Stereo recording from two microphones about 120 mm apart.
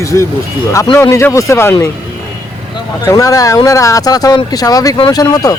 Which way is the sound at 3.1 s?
30° left (ahead or behind).